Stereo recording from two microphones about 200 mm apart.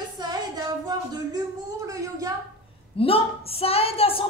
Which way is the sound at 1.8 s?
15° right (ahead or behind).